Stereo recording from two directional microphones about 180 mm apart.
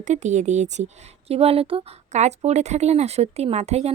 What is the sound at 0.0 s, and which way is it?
Speech, 40° right (ahead or behind).